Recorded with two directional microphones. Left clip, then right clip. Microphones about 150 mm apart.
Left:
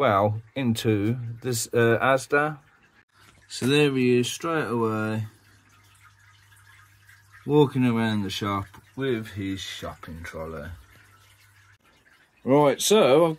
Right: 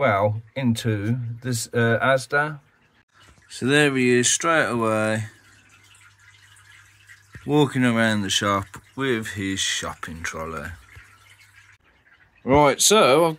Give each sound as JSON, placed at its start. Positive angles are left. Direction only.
{"t": 0.0, "sound": "speech", "side_deg": 40}
{"t": 3.4, "sound": "speech", "side_deg": 5}
{"t": 7.4, "sound": "speech", "side_deg": 0}
{"t": 12.4, "sound": "speech", "side_deg": 0}